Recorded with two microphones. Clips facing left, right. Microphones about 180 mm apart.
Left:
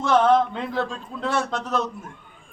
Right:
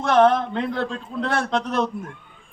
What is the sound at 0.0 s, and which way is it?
Speech, 60° right (ahead or behind).